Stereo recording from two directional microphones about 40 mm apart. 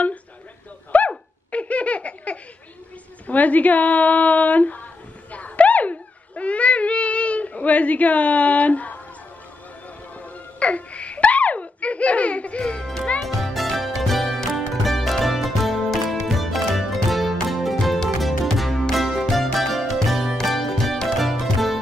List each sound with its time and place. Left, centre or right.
0.9 s laughter: left
3.3 s speech: left
5.3 s dog: left
10.1 s music: left
13.2 s music: centre